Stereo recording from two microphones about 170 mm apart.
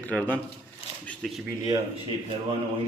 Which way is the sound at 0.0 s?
10° left (ahead or behind).